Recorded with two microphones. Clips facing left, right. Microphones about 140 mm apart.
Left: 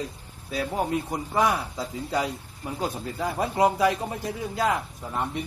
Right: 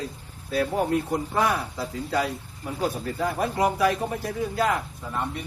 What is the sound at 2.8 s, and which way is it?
Speech, 20° left (ahead or behind).